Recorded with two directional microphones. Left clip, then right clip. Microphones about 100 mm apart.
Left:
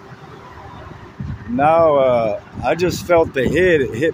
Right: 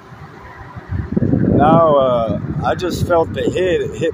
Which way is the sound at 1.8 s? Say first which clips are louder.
Right 1 dB; 35° left (ahead or behind).